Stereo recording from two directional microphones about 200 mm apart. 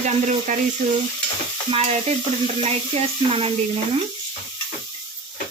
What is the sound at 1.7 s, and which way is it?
Stir, 30° right (ahead or behind).